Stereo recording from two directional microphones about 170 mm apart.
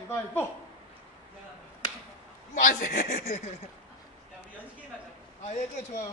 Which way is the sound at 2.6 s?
55° left (ahead or behind).